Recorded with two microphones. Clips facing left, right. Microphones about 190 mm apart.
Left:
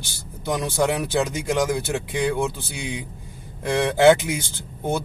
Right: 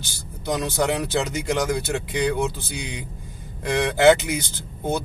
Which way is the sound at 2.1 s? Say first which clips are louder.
Even; 15° right (ahead or behind).